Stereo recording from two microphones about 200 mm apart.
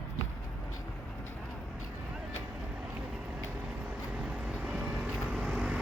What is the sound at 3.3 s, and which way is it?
Vehicle, 5° right (ahead or behind).